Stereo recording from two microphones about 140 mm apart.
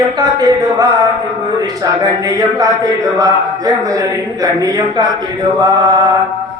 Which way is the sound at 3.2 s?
25° right (ahead or behind).